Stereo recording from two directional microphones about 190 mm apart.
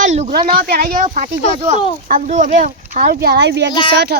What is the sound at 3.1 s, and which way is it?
Speech, 55° right (ahead or behind).